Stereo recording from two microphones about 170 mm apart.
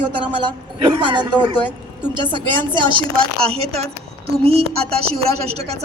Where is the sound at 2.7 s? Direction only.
30° right (ahead or behind).